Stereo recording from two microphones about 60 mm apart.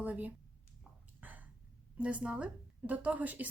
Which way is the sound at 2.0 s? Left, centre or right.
Right.